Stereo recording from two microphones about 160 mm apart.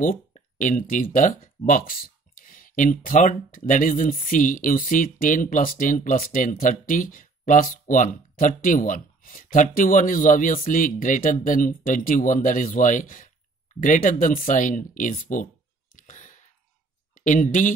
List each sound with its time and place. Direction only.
0.6 s speech: 55° left (ahead or behind)
16.0 s a sound: 50° left (ahead or behind)
17.1 s speech: 55° left (ahead or behind)